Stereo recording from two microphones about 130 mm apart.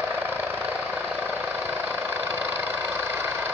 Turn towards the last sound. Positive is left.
turn(degrees=-15)  # may be behind; listen again after turning